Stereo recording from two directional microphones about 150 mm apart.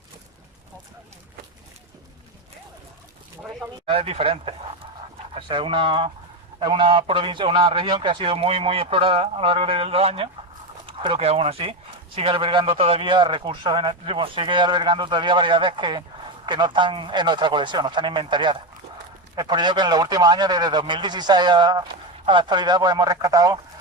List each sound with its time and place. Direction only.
3.8 s a man's voice: 40° right (ahead or behind)